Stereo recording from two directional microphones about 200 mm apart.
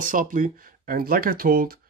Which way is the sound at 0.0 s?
40° right (ahead or behind).